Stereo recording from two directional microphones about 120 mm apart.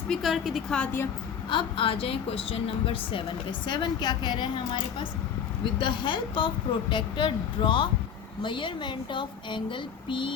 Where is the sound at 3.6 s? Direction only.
40° left (ahead or behind).